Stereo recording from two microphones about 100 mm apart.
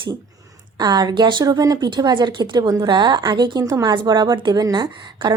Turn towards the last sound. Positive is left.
turn(degrees=-50)  # may be behind; listen again after turning